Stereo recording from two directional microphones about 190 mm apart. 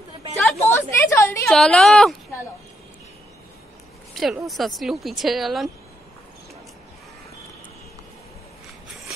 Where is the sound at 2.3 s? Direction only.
15° left (ahead or behind).